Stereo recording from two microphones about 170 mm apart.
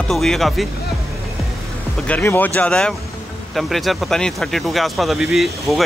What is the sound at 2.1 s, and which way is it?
Speech, 10° left (ahead or behind).